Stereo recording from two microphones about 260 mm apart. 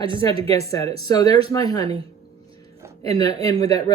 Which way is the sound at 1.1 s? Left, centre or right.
Centre.